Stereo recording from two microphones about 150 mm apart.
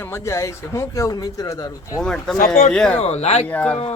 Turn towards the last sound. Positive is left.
turn(degrees=10)  # may be behind; listen again after turning